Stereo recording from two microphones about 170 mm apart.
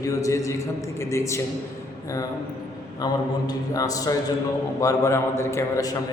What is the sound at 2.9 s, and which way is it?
A man's voice, 25° left (ahead or behind).